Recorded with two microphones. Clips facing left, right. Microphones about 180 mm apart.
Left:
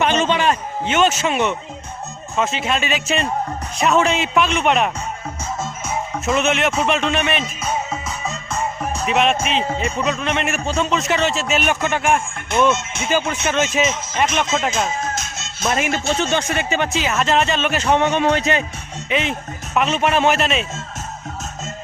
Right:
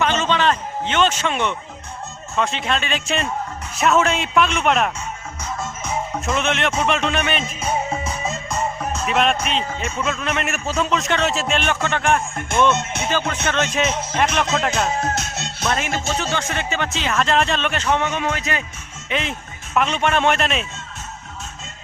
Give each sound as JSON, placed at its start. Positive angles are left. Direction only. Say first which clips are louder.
{"t": 0.0, "sound": "a man's voice", "louder": "left 2 dB", "side_deg": 15}
{"t": 6.2, "sound": "a man's voice", "louder": "left 4 dB", "side_deg": 5}
{"t": 7.6, "sound": "music", "louder": "right 1 dB", "side_deg": -25}
{"t": 8.8, "sound": "a man's voice", "louder": "left 2 dB", "side_deg": 0}
{"t": 12.7, "sound": "speech", "louder": "right 1 dB", "side_deg": -60}
{"t": 13.1, "sound": "a man's voice", "louder": "left 4 dB", "side_deg": 10}
{"t": 15.0, "sound": "music", "louder": "right 2 dB", "side_deg": -65}
{"t": 16.2, "sound": "speech", "louder": "left 4 dB", "side_deg": 20}
{"t": 17.8, "sound": "a man's voice", "louder": "left 6 dB", "side_deg": 25}
{"t": 19.1, "sound": "a man's voice", "louder": "left 3 dB", "side_deg": 0}